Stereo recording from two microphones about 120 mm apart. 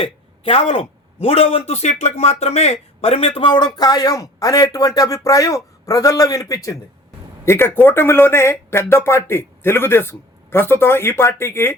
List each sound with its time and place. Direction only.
0.0 s a man's voice: 50° left (ahead or behind); by 11.7 s 20° left (ahead or behind)